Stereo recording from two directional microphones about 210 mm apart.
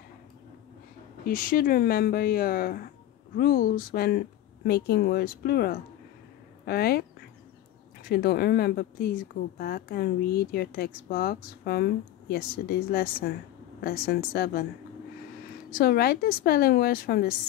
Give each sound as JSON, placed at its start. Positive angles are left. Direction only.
{"t": 1.2, "sound": "a woman's voice", "side_deg": 45}
{"t": 15.8, "sound": "a woman's voice", "side_deg": 45}